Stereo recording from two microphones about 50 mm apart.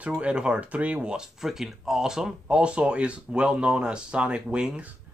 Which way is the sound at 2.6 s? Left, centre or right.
Right.